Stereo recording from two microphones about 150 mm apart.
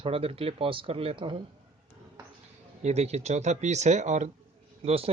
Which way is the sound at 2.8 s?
45° right (ahead or behind).